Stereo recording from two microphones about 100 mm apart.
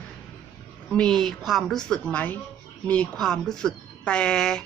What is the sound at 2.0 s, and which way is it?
Speech, 15° left (ahead or behind).